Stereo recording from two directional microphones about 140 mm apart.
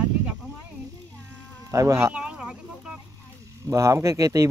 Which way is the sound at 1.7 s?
20° right (ahead or behind).